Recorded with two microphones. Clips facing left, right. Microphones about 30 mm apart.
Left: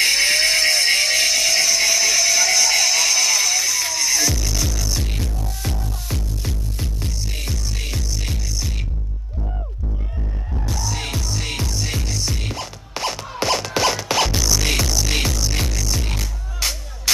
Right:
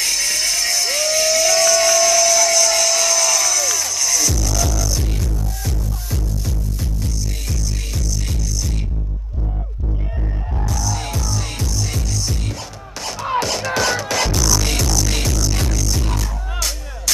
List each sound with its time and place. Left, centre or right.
0.0 s a sound: left
4.7 s music: left
10.6 s music: left